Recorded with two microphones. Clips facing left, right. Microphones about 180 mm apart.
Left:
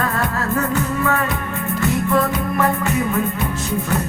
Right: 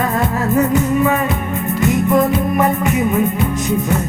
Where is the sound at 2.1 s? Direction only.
15° right (ahead or behind).